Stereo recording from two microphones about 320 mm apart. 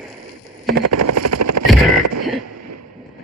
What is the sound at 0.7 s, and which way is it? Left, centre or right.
Vehicle, right.